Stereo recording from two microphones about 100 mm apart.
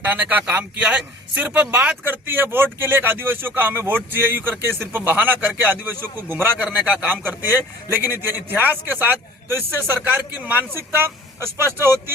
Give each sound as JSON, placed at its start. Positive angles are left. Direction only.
{"t": 0.0, "sound": "a man's voice", "side_deg": -15}